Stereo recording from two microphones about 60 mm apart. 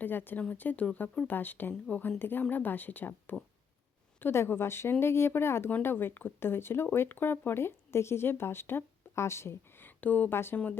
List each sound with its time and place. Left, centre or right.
0.0 s speech: left
4.2 s speech: left
9.8 s a sound: left
10.3 s speech: left